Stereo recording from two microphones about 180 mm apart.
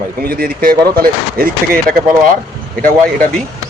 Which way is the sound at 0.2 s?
55° right (ahead or behind).